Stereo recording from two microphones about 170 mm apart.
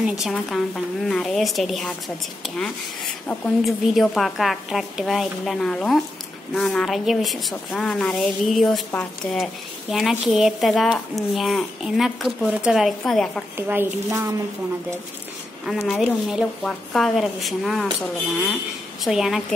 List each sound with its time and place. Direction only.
0.0 s a woman's voice: centre (ahead or behind)
3.3 s a woman's voice: 5° left (ahead or behind)
13.6 s speech: 10° right (ahead or behind)
15.6 s a woman's voice: centre (ahead or behind)
19.0 s a woman's voice: centre (ahead or behind)